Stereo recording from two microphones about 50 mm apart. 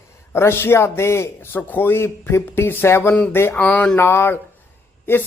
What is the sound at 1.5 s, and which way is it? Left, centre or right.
Speech, left.